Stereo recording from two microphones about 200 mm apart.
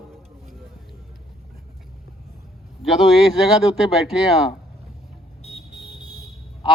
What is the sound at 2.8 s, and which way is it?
Music, centre (ahead or behind).